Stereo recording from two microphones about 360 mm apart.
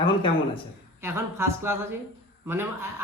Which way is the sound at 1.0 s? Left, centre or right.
Centre.